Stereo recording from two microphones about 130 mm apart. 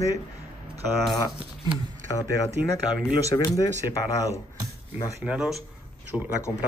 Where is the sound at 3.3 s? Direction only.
35° left (ahead or behind).